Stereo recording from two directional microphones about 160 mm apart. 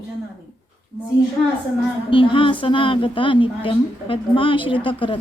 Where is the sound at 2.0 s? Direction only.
30° left (ahead or behind).